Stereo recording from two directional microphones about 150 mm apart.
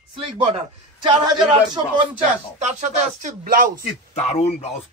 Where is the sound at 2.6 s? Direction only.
55° right (ahead or behind); by 3.7 s 70° right (ahead or behind).